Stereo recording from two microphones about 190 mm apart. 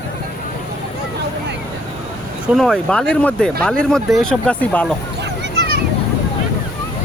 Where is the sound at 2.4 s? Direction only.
Centre (ahead or behind).